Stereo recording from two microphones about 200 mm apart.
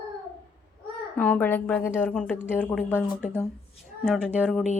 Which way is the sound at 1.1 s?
10° left (ahead or behind).